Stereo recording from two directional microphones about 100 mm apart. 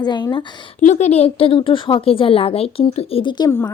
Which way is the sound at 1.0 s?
90° left.